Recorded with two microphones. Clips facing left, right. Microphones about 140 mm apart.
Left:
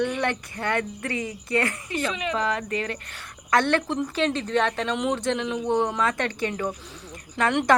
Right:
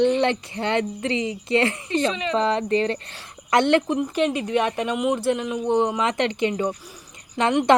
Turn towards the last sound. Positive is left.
turn(degrees=-25)  # may be behind; listen again after turning